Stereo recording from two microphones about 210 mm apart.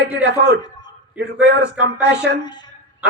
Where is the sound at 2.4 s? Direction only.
20° left (ahead or behind).